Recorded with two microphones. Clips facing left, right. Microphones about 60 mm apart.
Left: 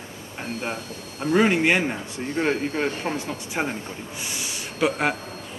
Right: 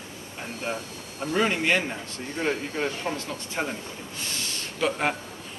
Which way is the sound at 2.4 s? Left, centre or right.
Left.